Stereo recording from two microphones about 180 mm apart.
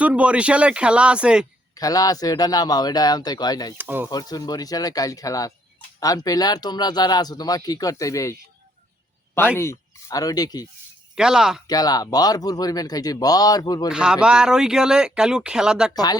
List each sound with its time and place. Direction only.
0.0 s speech: 5° right (ahead or behind)
1.7 s speech: 20° left (ahead or behind)
3.8 s speech: 10° right (ahead or behind)
4.1 s speech: 20° left (ahead or behind)
11.1 s speech: 5° right (ahead or behind)
11.7 s speech: 20° left (ahead or behind)
13.9 s speech: 5° right (ahead or behind)
15.9 s speech: 20° left (ahead or behind)